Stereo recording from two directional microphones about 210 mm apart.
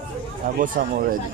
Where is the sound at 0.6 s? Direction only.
40° right (ahead or behind).